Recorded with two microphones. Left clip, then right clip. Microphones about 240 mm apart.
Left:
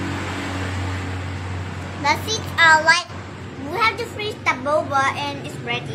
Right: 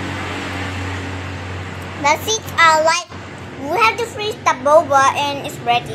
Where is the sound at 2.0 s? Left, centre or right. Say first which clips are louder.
Right 4 dB; left.